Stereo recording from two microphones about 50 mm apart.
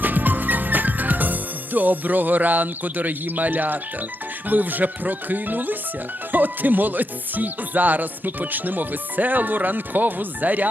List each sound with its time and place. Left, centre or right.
0.0 s music: right